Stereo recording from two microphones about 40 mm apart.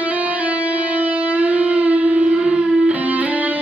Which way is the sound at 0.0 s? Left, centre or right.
Right.